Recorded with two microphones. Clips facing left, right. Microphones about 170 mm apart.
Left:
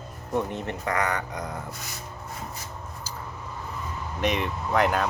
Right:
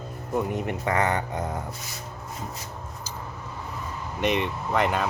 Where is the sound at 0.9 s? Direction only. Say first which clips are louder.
Right 2 dB; 25° right (ahead or behind).